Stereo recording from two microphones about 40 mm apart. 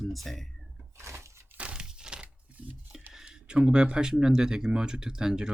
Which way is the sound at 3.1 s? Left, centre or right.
Right.